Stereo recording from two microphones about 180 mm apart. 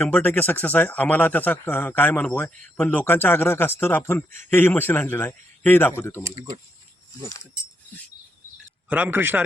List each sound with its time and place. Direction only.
0.0 s speech: 10° left (ahead or behind)
6.2 s speech: 20° right (ahead or behind)
8.9 s a man's voice: 10° right (ahead or behind)